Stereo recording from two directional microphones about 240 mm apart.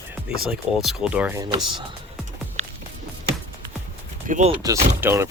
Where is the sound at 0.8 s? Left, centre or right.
Centre.